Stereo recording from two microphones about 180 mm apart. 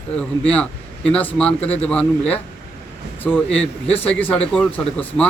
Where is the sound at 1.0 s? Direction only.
5° left (ahead or behind).